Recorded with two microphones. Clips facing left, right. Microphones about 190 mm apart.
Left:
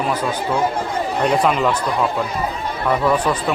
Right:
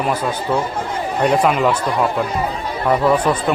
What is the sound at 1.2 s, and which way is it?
Speech, 5° right (ahead or behind).